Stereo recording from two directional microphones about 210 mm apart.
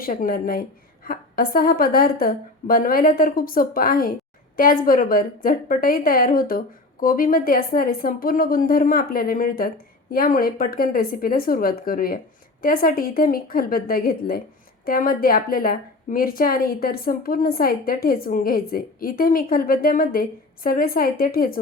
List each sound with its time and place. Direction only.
0.0 s a woman's voice: 40° left (ahead or behind)